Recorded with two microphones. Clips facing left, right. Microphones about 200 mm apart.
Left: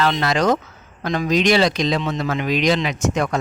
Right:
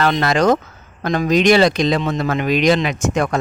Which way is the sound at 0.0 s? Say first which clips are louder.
Right 3 dB; 55° right (ahead or behind).